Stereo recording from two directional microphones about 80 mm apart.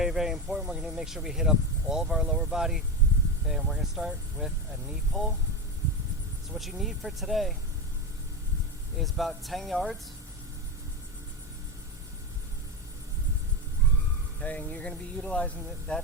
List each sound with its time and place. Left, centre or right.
0.0 s speech: centre
6.6 s speech: centre
9.0 s speech: centre
14.4 s speech: centre